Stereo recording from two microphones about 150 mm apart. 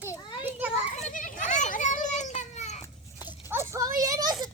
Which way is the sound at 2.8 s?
25° left (ahead or behind).